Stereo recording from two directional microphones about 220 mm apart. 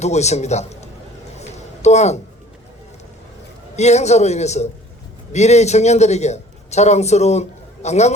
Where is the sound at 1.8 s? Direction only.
30° left (ahead or behind).